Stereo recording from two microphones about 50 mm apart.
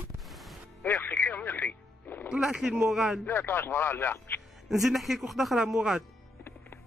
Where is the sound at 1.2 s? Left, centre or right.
Left.